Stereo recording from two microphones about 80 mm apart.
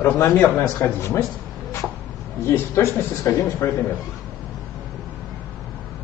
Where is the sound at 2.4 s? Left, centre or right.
Left.